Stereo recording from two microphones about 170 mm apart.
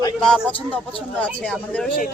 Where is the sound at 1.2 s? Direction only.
5° left (ahead or behind).